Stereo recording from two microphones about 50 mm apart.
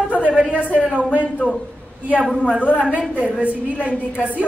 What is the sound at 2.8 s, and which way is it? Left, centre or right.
A man's voice, right.